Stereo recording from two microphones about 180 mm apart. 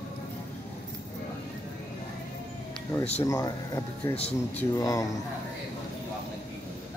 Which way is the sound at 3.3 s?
20° left (ahead or behind).